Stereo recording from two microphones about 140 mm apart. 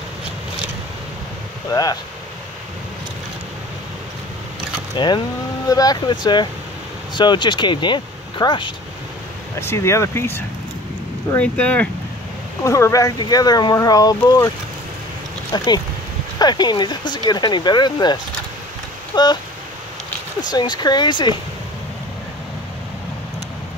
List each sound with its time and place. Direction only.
1.7 s speech: 25° left (ahead or behind)
4.9 s speech: 35° left (ahead or behind)
9.6 s speech: 20° left (ahead or behind)
12.6 s speech: 20° left (ahead or behind)
15.5 s speech: 30° left (ahead or behind)
20.4 s speech: 30° left (ahead or behind)